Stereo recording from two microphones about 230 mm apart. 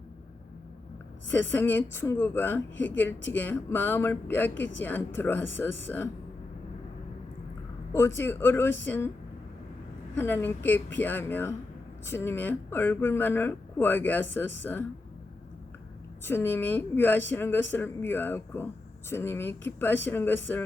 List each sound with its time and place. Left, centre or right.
1.3 s speech: centre
7.9 s speech: centre
10.2 s speech: centre
16.2 s speech: centre